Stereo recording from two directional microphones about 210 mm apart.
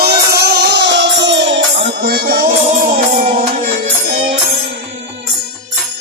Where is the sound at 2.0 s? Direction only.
45° right (ahead or behind).